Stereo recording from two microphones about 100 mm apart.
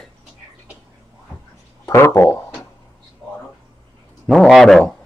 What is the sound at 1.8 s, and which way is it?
Speech, 25° left (ahead or behind).